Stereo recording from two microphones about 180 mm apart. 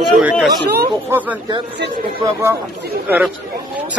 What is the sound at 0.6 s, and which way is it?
Speech, 65° right (ahead or behind).